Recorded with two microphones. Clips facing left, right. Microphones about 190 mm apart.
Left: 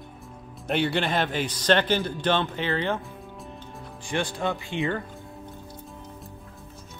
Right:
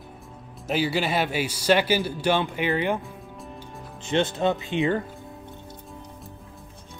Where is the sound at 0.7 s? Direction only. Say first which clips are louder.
Even; 5° right (ahead or behind).